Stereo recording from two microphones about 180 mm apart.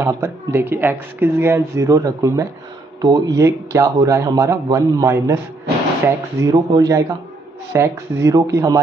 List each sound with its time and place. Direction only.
0.0 s speech: 15° right (ahead or behind)